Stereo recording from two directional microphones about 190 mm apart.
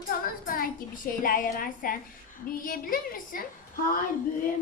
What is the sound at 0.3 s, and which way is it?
A woman's voice, 50° left (ahead or behind).